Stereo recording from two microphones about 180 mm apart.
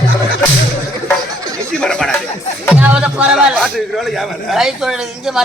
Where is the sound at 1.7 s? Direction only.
5° left (ahead or behind).